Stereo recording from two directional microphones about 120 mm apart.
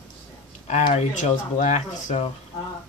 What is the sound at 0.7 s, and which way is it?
Speech, 70° left (ahead or behind).